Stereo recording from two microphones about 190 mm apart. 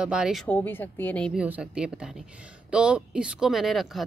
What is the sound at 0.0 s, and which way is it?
Speech, 5° right (ahead or behind).